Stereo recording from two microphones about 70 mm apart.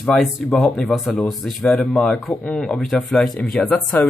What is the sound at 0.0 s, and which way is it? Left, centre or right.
Speech, centre.